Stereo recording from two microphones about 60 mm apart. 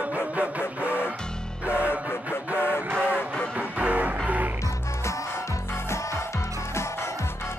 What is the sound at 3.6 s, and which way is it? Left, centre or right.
Music, right.